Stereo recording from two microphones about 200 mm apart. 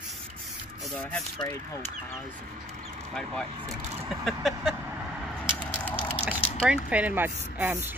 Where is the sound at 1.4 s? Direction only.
20° left (ahead or behind).